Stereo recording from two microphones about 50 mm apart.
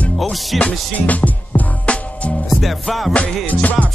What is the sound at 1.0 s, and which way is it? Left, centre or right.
Music, left.